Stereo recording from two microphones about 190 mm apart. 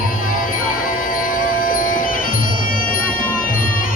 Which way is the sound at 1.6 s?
45° left (ahead or behind).